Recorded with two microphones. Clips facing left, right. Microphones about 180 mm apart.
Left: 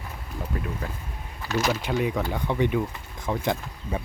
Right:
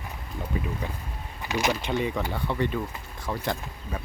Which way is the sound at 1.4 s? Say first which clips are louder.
Left 1 dB; 15° right (ahead or behind).